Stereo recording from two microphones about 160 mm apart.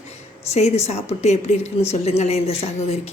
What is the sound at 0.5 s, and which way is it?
A woman's voice, 45° left (ahead or behind).